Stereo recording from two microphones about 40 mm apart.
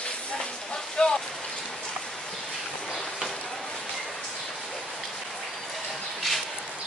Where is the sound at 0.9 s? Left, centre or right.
Centre.